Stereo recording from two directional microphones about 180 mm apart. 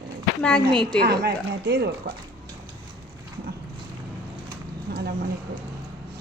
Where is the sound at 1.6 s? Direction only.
65° right (ahead or behind).